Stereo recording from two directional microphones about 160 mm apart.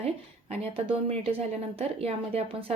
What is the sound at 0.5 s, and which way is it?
A woman's voice, 40° right (ahead or behind).